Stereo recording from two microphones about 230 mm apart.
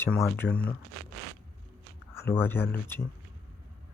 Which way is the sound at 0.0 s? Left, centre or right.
Centre.